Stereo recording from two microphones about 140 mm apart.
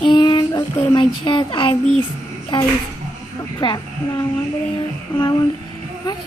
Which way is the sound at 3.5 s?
30° left (ahead or behind).